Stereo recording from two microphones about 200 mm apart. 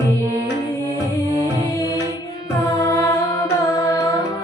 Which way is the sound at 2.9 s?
15° left (ahead or behind).